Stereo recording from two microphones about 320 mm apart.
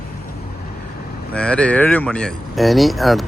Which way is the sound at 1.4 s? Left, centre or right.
Centre.